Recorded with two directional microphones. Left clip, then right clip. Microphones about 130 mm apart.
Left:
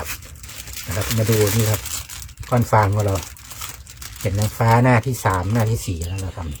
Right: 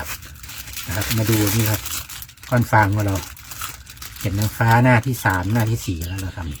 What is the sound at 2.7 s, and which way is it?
Speech, 25° left (ahead or behind).